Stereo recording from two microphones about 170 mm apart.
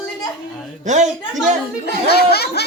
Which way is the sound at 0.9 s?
45° right (ahead or behind).